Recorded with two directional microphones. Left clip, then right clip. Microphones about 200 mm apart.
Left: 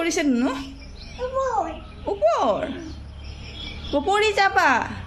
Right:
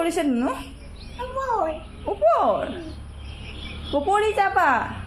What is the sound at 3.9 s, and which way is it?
Speech, 20° left (ahead or behind).